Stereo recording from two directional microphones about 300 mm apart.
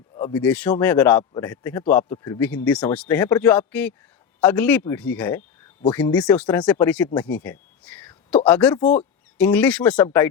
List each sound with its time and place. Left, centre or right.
0.2 s speech: centre
7.9 s a sound: centre
8.4 s speech: centre